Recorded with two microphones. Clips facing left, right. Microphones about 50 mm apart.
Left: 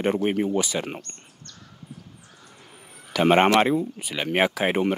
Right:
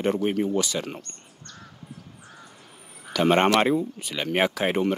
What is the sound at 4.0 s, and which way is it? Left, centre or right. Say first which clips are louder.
Speech: left 1 dB; centre.